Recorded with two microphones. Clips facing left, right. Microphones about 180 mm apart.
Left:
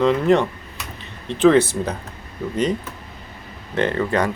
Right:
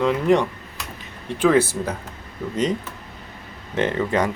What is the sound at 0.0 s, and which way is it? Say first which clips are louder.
Speech: left 2 dB; 10° right (ahead or behind).